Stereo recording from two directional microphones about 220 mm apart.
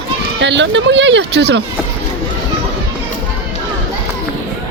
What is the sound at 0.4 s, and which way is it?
Speech, 55° right (ahead or behind).